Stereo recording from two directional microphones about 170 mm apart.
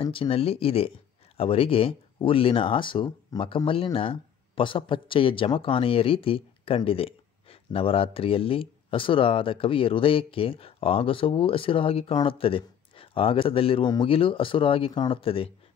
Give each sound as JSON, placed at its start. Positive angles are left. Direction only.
{"t": 0.0, "sound": "speech", "side_deg": 30}